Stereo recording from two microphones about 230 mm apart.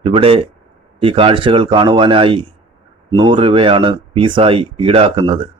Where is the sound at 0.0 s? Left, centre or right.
Right.